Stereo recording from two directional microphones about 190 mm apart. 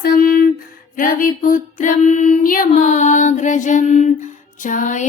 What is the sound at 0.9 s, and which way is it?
Female singing, 45° left (ahead or behind).